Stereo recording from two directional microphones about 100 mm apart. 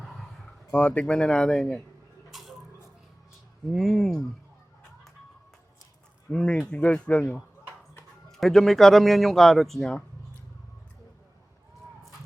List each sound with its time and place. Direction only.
0.7 s speech: 10° left (ahead or behind)
3.7 s a man's voice: centre (ahead or behind)
6.3 s a man's voice: 10° left (ahead or behind)